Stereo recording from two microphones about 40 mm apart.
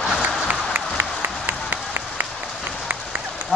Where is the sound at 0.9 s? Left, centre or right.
Right.